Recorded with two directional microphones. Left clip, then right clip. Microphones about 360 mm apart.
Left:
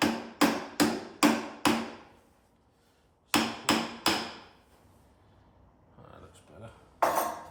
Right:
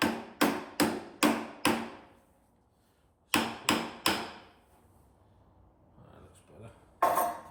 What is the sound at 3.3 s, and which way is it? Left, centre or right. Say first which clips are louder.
Hammer: left 2 dB; centre.